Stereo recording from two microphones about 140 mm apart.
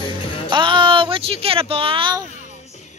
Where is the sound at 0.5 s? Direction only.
35° right (ahead or behind).